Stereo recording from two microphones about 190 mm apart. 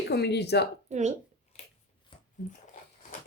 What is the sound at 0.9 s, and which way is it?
Speech, 35° right (ahead or behind).